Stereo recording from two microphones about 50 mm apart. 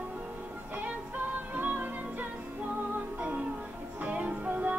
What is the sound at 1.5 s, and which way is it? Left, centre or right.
Music, right.